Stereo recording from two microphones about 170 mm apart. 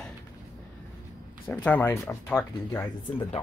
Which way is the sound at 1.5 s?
10° left (ahead or behind).